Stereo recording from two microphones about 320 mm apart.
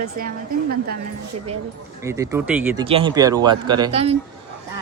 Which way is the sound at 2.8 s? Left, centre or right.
Centre.